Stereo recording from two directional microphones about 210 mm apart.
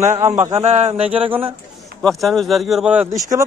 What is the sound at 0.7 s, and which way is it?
Speech, 30° right (ahead or behind).